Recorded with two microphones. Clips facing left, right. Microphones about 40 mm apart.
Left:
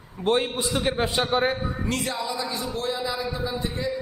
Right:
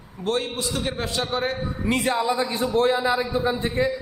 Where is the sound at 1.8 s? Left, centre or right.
Right.